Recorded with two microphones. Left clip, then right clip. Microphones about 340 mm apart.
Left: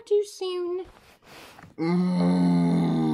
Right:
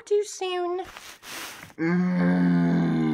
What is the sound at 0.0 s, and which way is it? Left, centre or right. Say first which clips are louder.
Speech: even; left.